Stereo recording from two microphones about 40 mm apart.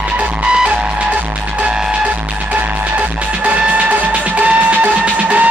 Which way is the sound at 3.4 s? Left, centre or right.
Right.